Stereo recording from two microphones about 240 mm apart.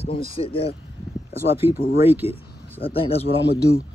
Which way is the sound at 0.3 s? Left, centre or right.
Left.